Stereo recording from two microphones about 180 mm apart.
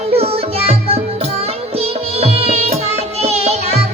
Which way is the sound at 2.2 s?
35° right (ahead or behind).